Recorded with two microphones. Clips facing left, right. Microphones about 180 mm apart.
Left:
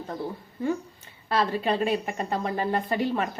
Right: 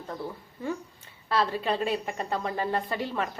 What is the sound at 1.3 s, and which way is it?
A woman's voice, 15° left (ahead or behind).